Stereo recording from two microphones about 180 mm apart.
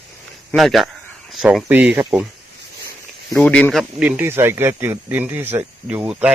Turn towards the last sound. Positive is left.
turn(degrees=-5)  # may be behind; listen again after turning